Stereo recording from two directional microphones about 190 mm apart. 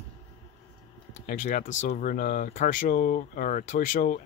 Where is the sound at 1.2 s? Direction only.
45° left (ahead or behind).